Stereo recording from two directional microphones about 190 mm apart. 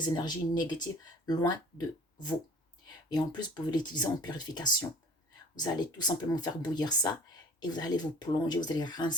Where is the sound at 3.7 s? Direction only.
20° left (ahead or behind).